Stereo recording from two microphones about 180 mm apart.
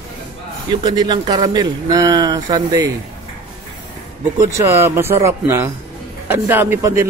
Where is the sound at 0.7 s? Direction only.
25° right (ahead or behind).